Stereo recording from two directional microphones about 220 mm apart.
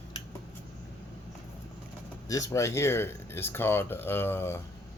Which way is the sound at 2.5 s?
15° left (ahead or behind).